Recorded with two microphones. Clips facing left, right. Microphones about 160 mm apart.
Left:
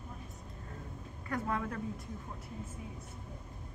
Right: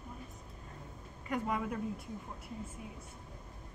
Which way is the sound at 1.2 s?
15° right (ahead or behind).